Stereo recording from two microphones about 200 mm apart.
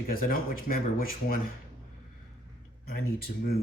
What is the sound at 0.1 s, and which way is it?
Speech, 45° left (ahead or behind).